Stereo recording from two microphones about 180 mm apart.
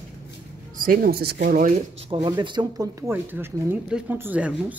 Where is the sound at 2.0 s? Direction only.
25° right (ahead or behind); by 4.7 s 5° right (ahead or behind).